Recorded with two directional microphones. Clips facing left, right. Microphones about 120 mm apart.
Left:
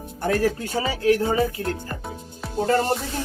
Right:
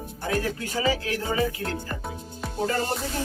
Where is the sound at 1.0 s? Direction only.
45° left (ahead or behind).